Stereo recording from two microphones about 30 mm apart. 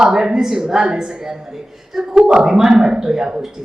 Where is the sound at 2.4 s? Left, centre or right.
Centre.